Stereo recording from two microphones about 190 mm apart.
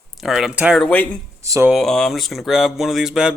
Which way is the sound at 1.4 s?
15° right (ahead or behind).